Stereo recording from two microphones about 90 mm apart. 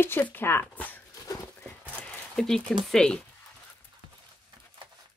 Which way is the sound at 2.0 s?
5° left (ahead or behind).